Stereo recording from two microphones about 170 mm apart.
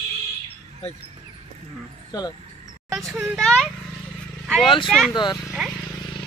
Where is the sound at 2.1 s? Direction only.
25° left (ahead or behind).